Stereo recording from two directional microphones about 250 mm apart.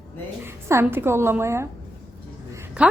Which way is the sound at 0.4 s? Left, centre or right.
Centre.